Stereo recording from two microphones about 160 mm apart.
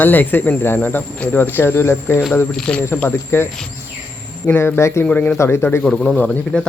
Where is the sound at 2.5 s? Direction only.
5° left (ahead or behind).